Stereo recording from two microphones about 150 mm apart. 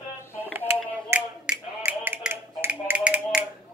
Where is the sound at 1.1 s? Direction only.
10° right (ahead or behind).